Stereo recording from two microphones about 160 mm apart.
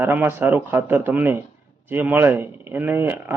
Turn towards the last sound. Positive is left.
turn(degrees=-10)  # may be behind; listen again after turning